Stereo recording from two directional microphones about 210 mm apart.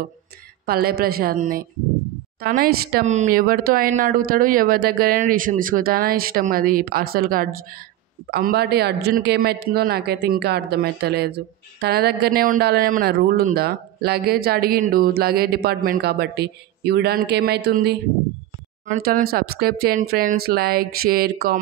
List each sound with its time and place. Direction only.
0.7 s speech: 45° right (ahead or behind)
18.9 s speech: 40° right (ahead or behind)